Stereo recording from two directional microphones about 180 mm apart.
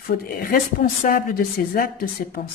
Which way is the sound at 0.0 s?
55° left (ahead or behind).